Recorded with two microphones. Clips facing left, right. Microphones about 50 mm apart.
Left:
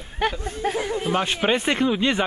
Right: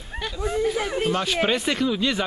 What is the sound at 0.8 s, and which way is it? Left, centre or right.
Speech, right.